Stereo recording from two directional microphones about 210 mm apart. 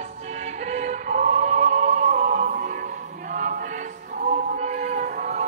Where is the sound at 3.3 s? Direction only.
40° right (ahead or behind).